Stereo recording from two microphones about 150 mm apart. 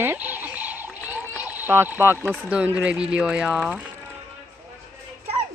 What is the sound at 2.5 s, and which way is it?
Speech, 10° right (ahead or behind).